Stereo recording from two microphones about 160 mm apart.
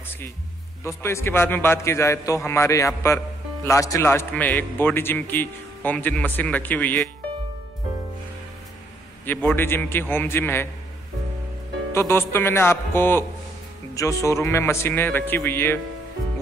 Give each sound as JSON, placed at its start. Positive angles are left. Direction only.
{"t": 0.8, "sound": "a man's voice", "side_deg": 15}
{"t": 9.2, "sound": "a man's voice", "side_deg": 10}
{"t": 11.9, "sound": "a man's voice", "side_deg": 15}